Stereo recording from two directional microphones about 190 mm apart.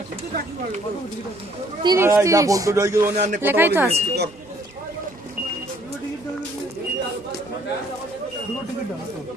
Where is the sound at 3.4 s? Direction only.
10° right (ahead or behind).